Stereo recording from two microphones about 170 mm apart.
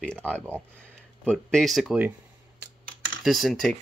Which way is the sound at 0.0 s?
5° left (ahead or behind).